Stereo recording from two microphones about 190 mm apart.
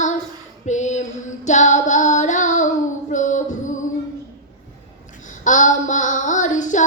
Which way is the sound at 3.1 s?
40° left (ahead or behind).